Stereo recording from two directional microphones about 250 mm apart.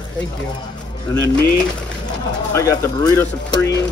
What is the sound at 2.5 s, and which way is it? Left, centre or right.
Speech, centre.